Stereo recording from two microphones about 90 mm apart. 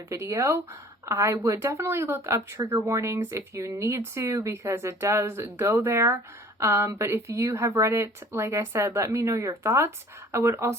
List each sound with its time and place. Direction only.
0.1 s speech: 35° right (ahead or behind)